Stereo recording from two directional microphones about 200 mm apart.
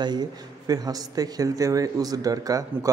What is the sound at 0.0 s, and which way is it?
A man's voice, 20° right (ahead or behind).